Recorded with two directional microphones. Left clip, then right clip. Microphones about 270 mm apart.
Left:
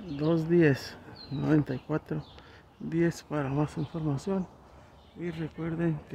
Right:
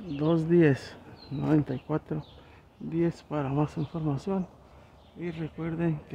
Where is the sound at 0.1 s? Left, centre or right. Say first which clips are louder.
Right 2 dB; centre.